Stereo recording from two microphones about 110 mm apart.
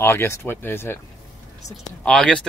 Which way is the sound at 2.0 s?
5° left (ahead or behind).